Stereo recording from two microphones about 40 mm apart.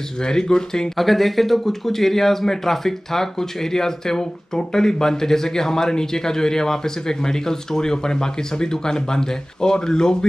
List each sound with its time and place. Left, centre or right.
0.2 s speech: centre
0.9 s speech: centre